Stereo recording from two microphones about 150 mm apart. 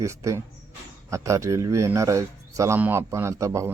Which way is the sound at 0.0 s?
20° right (ahead or behind).